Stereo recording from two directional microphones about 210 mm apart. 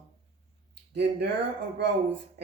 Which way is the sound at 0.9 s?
55° right (ahead or behind).